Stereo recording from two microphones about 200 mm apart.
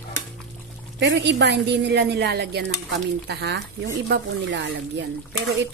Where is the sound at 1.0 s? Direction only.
60° right (ahead or behind).